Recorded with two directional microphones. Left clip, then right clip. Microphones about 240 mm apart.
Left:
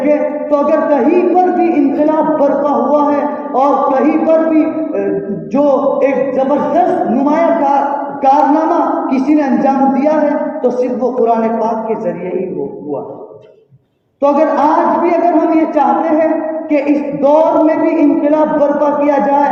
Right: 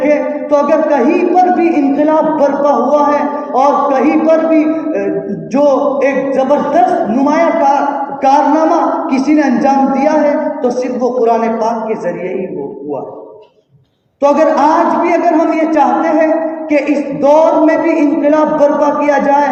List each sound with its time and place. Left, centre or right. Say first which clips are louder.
0.0 s a sound: right 1 dB; right
8.2 s a man's voice: right 1 dB; right
14.2 s a man's voice: right 2 dB; right